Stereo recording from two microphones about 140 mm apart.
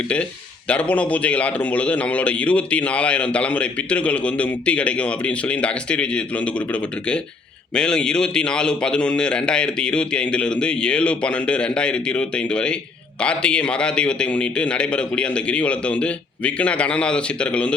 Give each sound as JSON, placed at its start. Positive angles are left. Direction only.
{"t": 0.7, "sound": "a man's voice", "side_deg": 10}
{"t": 7.8, "sound": "a man's voice", "side_deg": 5}